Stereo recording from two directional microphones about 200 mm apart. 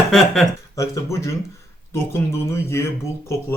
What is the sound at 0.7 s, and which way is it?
Speech, 15° left (ahead or behind).